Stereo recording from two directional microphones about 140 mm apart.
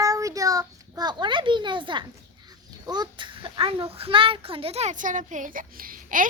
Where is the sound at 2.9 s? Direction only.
35° right (ahead or behind).